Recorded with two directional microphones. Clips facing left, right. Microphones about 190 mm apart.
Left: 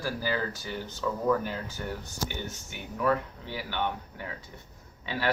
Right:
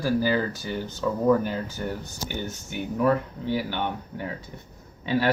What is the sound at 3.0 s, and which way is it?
Speech, 40° right (ahead or behind).